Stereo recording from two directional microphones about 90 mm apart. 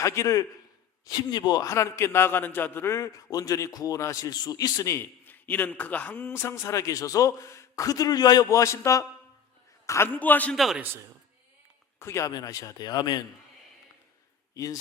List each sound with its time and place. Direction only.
0.0 s a man's voice: 35° left (ahead or behind)
1.0 s speech: 50° left (ahead or behind)
1.6 s a man's voice: 30° left (ahead or behind)
4.9 s a man's voice: 20° left (ahead or behind)
10.1 s a man's voice: 20° left (ahead or behind)
10.5 s a man's voice: centre (ahead or behind)
10.8 s a man's voice: 25° right (ahead or behind)
11.9 s speech: 30° left (ahead or behind)
12.3 s speech: 40° left (ahead or behind)
14.5 s speech: 40° left (ahead or behind)